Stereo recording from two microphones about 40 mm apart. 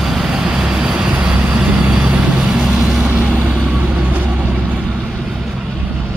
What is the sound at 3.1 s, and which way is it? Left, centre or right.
Vehicle, right.